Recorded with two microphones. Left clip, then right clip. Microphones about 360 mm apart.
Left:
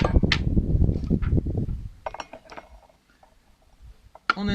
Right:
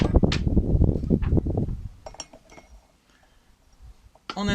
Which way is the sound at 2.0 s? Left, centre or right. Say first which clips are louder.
Left 7 dB; left.